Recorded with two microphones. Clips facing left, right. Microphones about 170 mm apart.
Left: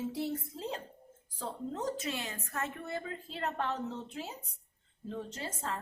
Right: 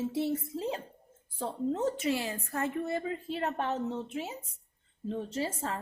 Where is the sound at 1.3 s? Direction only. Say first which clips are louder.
Right 6 dB; 25° right (ahead or behind).